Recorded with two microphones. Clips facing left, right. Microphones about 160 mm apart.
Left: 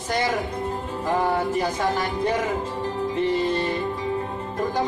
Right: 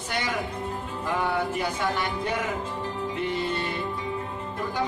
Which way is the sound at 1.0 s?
40° left (ahead or behind).